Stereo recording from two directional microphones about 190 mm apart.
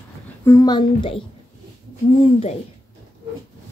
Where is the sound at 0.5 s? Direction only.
20° left (ahead or behind).